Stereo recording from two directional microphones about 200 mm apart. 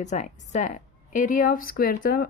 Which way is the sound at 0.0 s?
35° left (ahead or behind).